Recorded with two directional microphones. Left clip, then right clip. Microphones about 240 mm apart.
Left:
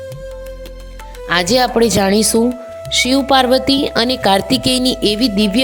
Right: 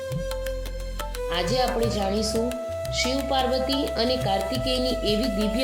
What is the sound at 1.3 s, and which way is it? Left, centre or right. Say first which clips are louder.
A woman's voice: left 11 dB; left.